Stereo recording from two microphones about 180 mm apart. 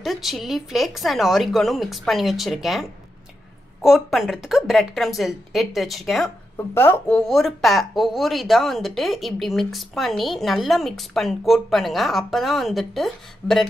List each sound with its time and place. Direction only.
0.0 s speech: centre (ahead or behind)
6.5 s speech: 15° left (ahead or behind)